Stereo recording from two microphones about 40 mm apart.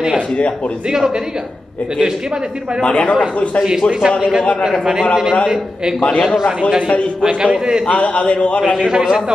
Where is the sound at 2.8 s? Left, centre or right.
Left.